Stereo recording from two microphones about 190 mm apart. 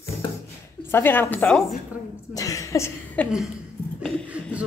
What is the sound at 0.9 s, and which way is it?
A woman's voice, 10° left (ahead or behind).